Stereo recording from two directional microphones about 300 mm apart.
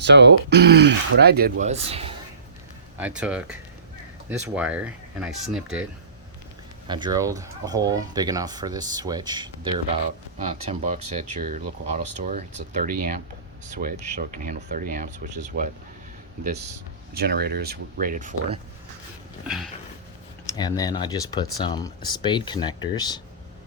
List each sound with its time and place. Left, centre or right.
0.0 s speech: right; by 2.1 s centre
3.0 s speech: centre
6.8 s speech: centre
17.2 s speech: right
19.5 s speech: centre
20.6 s speech: centre